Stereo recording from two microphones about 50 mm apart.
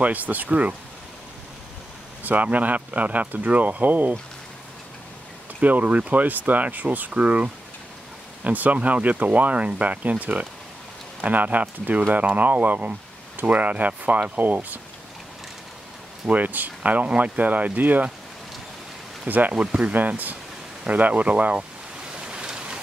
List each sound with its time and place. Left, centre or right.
0.0 s speech: right
2.2 s speech: right
5.6 s speech: right
16.3 s speech: right
19.2 s speech: right
19.5 s speech: right
20.0 s speech: right
22.1 s waves: centre